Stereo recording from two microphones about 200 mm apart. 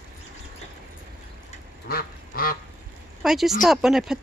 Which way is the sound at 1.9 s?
50° left (ahead or behind).